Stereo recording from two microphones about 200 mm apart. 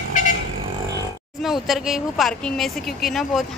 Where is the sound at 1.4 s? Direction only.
Centre (ahead or behind).